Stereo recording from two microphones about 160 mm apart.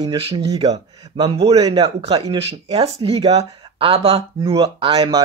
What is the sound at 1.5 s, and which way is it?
Speech, 25° right (ahead or behind).